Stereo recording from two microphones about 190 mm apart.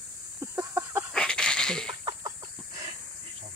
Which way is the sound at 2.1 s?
20° right (ahead or behind).